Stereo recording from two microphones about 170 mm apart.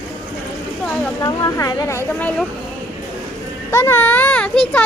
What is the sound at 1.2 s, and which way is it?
A woman's voice, 20° left (ahead or behind).